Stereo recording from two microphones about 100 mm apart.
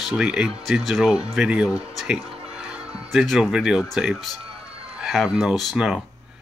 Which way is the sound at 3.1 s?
Centre (ahead or behind).